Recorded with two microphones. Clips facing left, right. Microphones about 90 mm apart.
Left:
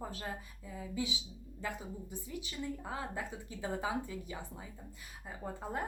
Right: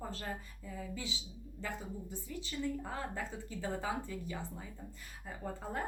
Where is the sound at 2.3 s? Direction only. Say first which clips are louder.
Right 3 dB; 15° left (ahead or behind).